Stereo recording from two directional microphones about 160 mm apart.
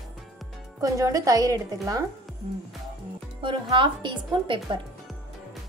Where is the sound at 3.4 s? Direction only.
30° right (ahead or behind).